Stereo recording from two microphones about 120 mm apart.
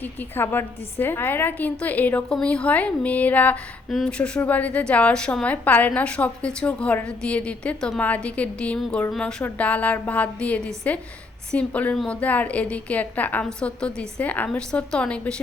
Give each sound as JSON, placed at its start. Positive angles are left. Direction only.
{"t": 0.0, "sound": "a woman's voice", "side_deg": 15}